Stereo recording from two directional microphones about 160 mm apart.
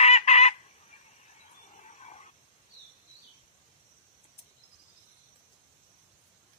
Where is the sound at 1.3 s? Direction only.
45° left (ahead or behind).